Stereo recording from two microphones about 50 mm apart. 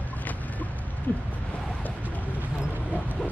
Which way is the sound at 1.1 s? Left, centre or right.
Left.